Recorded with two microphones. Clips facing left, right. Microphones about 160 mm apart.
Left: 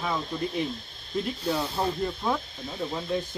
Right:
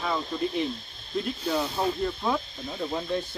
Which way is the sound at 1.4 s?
Centre (ahead or behind).